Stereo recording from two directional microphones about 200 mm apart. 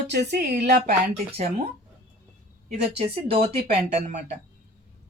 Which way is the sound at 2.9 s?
30° right (ahead or behind).